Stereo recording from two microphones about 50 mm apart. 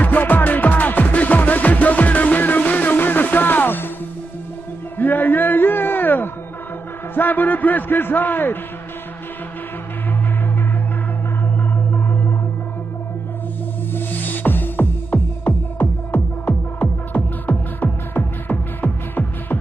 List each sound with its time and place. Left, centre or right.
0.0 s music: left
4.9 s music: left
7.2 s a man's voice: left
11.9 s music: left
13.9 s music: left